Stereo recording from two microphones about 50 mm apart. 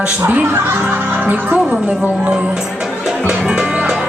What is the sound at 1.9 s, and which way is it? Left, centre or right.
Speech, right.